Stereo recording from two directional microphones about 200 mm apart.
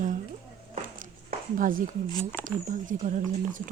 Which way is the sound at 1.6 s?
45° right (ahead or behind).